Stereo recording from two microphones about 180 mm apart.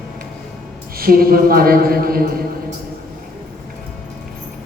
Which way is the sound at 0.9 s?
55° right (ahead or behind).